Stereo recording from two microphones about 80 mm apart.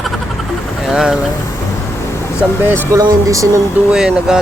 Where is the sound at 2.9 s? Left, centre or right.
Right.